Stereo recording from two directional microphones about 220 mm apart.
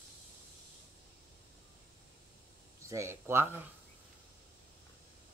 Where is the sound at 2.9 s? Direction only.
10° right (ahead or behind).